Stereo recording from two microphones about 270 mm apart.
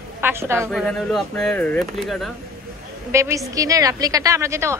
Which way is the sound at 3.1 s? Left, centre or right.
Centre.